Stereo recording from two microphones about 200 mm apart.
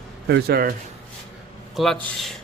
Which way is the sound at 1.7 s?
Centre (ahead or behind).